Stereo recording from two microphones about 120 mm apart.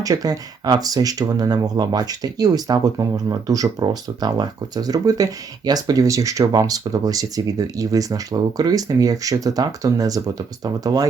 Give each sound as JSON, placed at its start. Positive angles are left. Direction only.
{"t": 0.0, "sound": "speech", "side_deg": -30}